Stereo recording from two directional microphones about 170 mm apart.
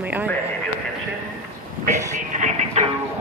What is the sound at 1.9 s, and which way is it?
Music, 45° right (ahead or behind).